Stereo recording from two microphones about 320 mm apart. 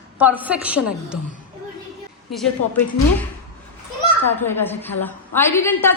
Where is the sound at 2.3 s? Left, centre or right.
Centre.